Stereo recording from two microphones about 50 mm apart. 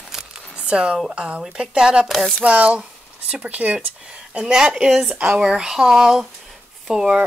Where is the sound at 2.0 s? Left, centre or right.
Centre.